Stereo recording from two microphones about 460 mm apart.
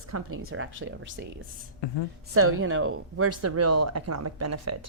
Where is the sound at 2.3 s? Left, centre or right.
Right.